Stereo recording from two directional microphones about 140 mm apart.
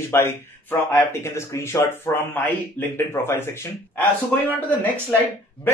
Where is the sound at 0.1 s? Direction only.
20° left (ahead or behind).